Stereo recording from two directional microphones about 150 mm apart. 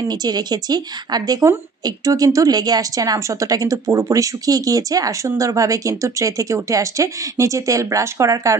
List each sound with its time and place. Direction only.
0.1 s a woman's voice: 25° right (ahead or behind)